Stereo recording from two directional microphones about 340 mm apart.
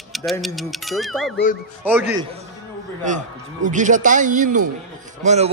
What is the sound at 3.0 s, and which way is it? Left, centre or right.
A man's voice, right.